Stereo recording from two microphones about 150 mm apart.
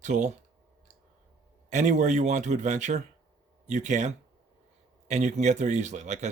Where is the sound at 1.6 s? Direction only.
55° right (ahead or behind).